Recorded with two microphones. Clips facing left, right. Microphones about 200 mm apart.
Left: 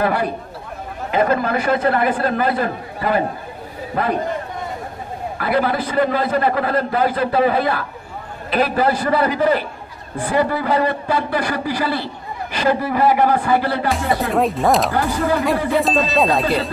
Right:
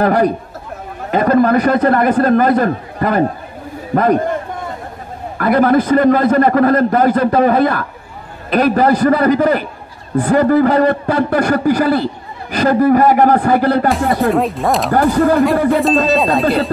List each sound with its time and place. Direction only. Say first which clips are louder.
0.0 s a man's voice: right 6 dB; 45° right (ahead or behind)
5.4 s a man's voice: right 8 dB; 50° right (ahead or behind)
14.1 s ding: right 4 dB; centre (ahead or behind)
14.9 s a man's voice: right 7 dB; 50° right (ahead or behind)
15.7 s ding: right 5 dB; centre (ahead or behind)